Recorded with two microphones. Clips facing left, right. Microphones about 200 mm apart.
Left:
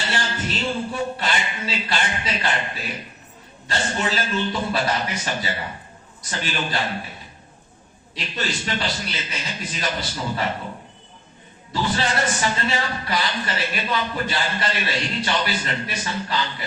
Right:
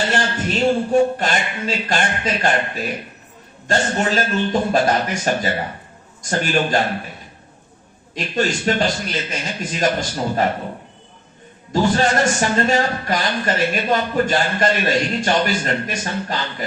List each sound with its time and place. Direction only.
0.1 s a man's voice: 45° right (ahead or behind)
8.1 s a man's voice: 45° right (ahead or behind)
11.7 s a man's voice: 45° right (ahead or behind)